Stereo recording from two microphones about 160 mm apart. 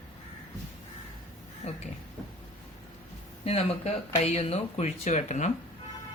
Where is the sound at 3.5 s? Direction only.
40° left (ahead or behind).